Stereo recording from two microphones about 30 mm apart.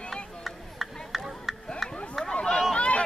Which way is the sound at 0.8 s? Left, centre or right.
Centre.